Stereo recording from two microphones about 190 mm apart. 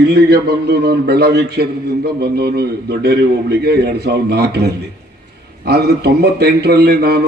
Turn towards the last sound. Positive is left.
turn(degrees=-55)  # may be behind; listen again after turning